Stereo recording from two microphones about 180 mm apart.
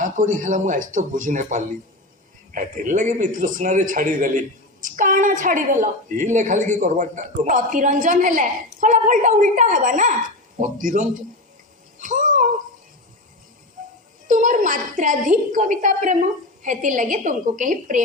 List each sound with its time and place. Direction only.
0.0 s a woman's voice: 45° right (ahead or behind)
11.9 s a sound: 45° right (ahead or behind)
14.3 s a woman's voice: 45° right (ahead or behind)